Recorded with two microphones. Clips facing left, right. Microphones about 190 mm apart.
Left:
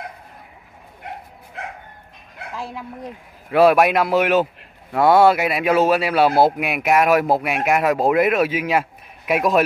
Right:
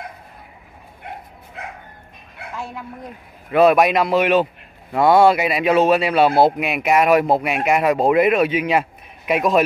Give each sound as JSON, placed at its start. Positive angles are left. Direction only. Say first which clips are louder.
{"t": 2.5, "sound": "bow-wow", "louder": "even", "side_deg": 35}
{"t": 3.5, "sound": "a man's voice", "louder": "even", "side_deg": 10}